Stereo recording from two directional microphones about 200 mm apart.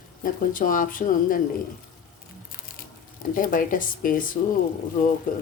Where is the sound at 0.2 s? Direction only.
45° left (ahead or behind).